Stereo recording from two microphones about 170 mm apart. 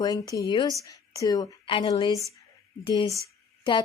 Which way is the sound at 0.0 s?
20° left (ahead or behind).